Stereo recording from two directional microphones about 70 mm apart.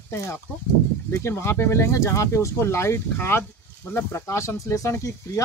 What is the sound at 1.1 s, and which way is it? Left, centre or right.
A man's voice, left.